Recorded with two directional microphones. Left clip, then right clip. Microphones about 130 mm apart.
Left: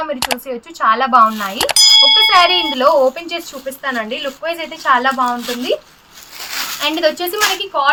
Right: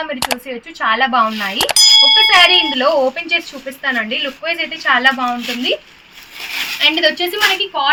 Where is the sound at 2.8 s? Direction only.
15° left (ahead or behind).